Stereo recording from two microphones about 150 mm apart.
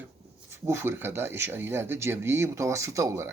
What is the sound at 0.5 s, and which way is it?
Speech, 15° right (ahead or behind).